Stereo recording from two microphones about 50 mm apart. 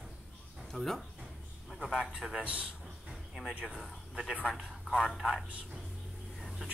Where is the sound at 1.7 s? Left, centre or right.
Centre.